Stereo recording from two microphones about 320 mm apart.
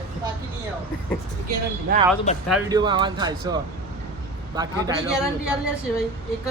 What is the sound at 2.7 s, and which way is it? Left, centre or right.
A man's voice, centre.